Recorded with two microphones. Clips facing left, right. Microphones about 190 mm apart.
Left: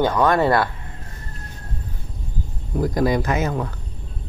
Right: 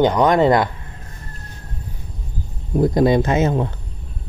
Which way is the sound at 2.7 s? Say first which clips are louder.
Right 5 dB; 25° right (ahead or behind).